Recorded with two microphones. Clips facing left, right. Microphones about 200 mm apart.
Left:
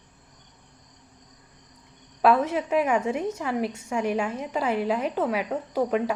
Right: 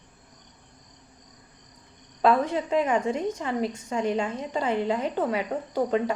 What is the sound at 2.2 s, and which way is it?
A woman's voice, 5° left (ahead or behind).